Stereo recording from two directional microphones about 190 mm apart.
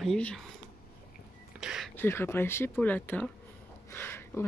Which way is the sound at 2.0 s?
10° left (ahead or behind).